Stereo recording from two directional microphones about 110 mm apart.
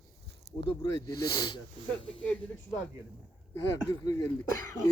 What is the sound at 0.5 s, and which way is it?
Speech, 35° left (ahead or behind).